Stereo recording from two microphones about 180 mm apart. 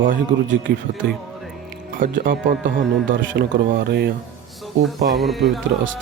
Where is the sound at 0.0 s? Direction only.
50° right (ahead or behind).